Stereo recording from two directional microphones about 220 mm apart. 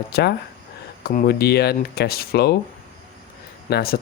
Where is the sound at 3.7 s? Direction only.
45° left (ahead or behind).